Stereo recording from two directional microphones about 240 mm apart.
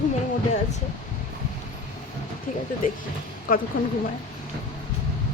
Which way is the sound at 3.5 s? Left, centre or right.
Left.